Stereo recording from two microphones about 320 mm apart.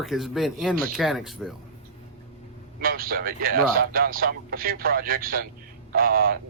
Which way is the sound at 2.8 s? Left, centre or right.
Right.